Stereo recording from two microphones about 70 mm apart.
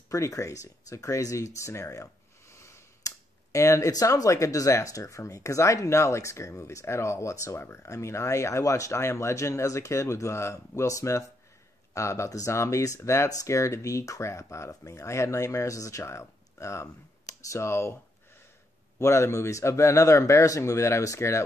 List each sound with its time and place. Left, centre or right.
0.1 s speech: left
2.5 s a sound: left
3.5 s speech: left
3.9 s speech: left
18.9 s speech: left